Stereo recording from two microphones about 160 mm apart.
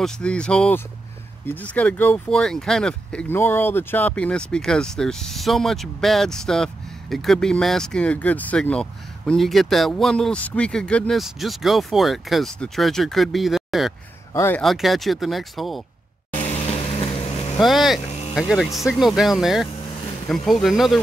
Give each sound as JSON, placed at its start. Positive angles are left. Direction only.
{"t": 0.0, "sound": "speech", "side_deg": 5}
{"t": 14.3, "sound": "speech", "side_deg": 15}
{"t": 14.6, "sound": "speech", "side_deg": 0}
{"t": 16.4, "sound": "vehicle", "side_deg": 40}
{"t": 17.6, "sound": "speech", "side_deg": 0}